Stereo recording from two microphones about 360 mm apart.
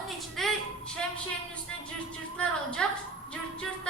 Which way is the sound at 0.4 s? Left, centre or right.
Centre.